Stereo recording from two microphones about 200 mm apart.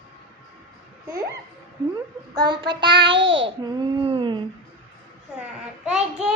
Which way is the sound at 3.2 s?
65° right (ahead or behind).